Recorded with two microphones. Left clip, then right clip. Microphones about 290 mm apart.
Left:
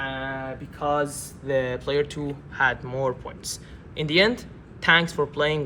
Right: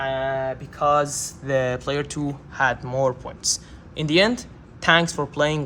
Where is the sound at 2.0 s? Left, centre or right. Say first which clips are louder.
Right 3 dB; right.